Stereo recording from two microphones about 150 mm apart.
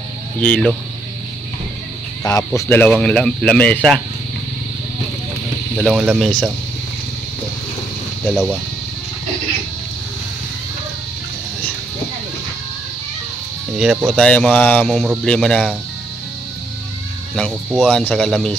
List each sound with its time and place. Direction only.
0.4 s speech: 5° left (ahead or behind)
2.2 s speech: 20° left (ahead or behind)
2.8 s speech: 5° left (ahead or behind)
5.8 s speech: centre (ahead or behind)
8.3 s speech: centre (ahead or behind)
13.7 s speech: centre (ahead or behind)
14.9 s speech: centre (ahead or behind)
17.8 s speech: 5° left (ahead or behind)